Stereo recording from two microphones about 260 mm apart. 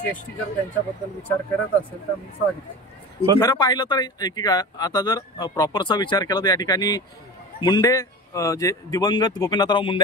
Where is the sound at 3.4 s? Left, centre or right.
Centre.